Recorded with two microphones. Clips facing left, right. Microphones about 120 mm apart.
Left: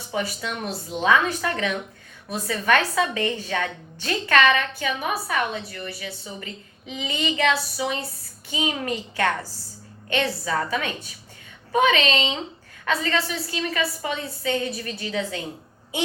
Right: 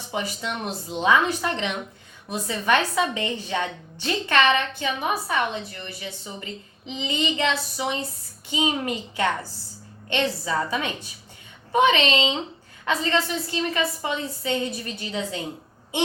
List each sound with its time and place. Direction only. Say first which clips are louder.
0.1 s a woman's voice: left 1 dB; 20° right (ahead or behind)